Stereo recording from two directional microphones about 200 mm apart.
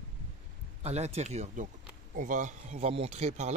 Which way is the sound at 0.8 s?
30° right (ahead or behind).